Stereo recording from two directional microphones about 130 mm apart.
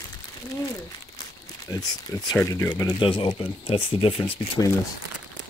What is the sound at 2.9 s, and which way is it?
Speech, 40° left (ahead or behind).